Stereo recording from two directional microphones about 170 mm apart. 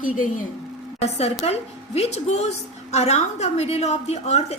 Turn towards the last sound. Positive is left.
turn(degrees=40)  # may be behind; listen again after turning